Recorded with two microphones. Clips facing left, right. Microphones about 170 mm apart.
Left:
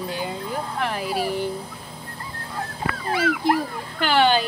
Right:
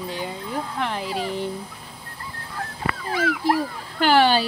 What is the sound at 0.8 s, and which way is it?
Speech, 10° left (ahead or behind).